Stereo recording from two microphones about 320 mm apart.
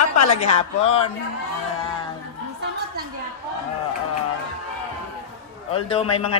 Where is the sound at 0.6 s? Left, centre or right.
Centre.